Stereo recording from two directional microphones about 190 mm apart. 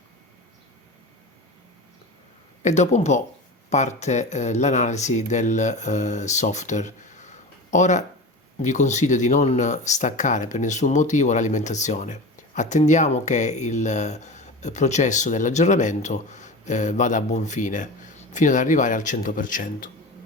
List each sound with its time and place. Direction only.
2.6 s speech: 40° left (ahead or behind)